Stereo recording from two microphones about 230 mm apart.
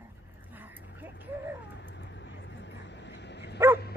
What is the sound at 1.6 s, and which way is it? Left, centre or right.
Vehicle, left.